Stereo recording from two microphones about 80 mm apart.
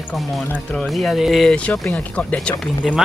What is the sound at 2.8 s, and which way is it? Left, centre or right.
Speech, centre.